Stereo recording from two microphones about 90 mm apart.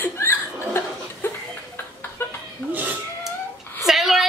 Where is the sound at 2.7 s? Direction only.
20° right (ahead or behind).